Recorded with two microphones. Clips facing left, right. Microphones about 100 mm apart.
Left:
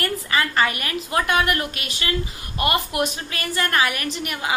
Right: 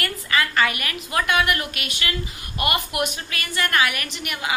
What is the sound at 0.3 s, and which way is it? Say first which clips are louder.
A woman's voice: even; 35° left (ahead or behind).